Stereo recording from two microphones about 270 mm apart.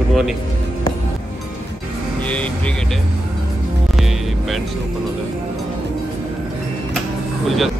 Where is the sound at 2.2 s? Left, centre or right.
Centre.